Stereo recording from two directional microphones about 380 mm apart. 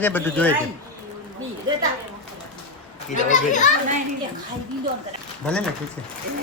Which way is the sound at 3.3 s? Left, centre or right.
Centre.